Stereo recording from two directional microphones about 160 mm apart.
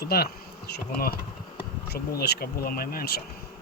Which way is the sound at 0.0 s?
75° left (ahead or behind).